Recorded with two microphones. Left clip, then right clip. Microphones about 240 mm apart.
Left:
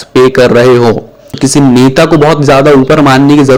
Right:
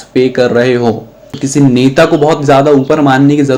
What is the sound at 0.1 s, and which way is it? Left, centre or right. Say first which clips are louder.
Speech: left 5 dB; left.